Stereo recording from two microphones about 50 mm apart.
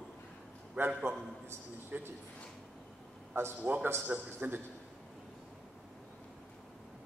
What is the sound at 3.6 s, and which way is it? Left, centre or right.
A man's voice, right.